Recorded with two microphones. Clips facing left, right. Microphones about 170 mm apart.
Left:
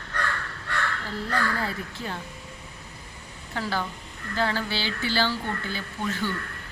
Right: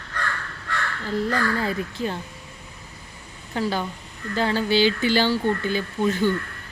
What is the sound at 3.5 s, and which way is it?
Speech, 20° right (ahead or behind).